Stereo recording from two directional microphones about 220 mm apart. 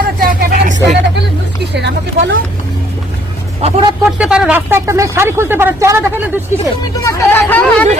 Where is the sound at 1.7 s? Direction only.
50° right (ahead or behind).